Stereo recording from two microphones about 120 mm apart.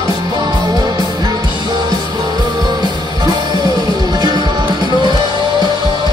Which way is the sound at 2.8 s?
35° right (ahead or behind).